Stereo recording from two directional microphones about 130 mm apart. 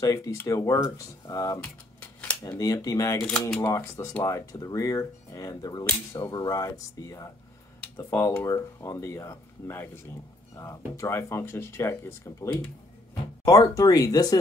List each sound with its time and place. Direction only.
0.0 s speech: 25° left (ahead or behind)
1.6 s a sound: 10° left (ahead or behind)
2.4 s speech: 25° left (ahead or behind)
3.3 s speech: 5° left (ahead or behind)
4.2 s speech: 25° left (ahead or behind)